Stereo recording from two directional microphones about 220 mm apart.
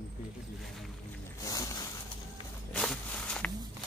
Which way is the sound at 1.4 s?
15° left (ahead or behind).